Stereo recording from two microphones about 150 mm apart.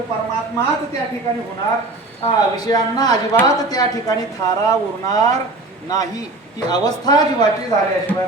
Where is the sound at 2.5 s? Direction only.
25° left (ahead or behind).